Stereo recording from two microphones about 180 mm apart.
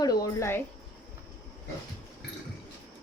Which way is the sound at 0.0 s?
20° left (ahead or behind).